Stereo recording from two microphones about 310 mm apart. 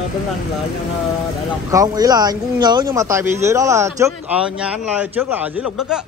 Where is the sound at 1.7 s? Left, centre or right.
Centre.